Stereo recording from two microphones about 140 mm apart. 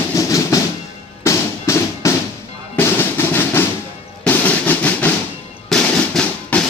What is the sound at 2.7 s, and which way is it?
Drum, 15° left (ahead or behind).